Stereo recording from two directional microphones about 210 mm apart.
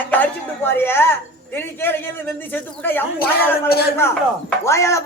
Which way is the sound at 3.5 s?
50° left (ahead or behind).